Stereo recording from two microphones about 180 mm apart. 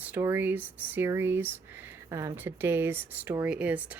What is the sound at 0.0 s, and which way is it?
Speech, 10° right (ahead or behind).